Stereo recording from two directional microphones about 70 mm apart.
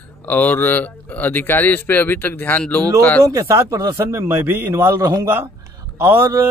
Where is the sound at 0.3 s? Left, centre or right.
Left.